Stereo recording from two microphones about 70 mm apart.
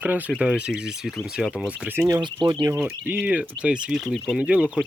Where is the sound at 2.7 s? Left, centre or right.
Right.